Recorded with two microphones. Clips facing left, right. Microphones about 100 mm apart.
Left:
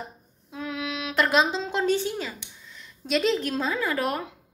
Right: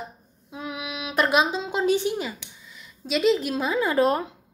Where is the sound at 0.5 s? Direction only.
15° right (ahead or behind).